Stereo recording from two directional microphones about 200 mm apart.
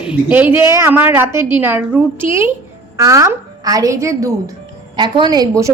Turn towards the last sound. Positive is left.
turn(degrees=-20)  # may be behind; listen again after turning